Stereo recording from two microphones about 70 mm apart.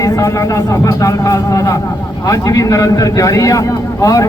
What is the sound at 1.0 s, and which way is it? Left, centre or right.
Speech, left.